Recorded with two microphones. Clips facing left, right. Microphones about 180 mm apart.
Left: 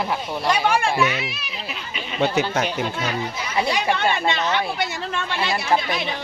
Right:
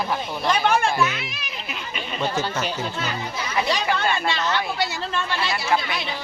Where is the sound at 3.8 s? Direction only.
20° left (ahead or behind).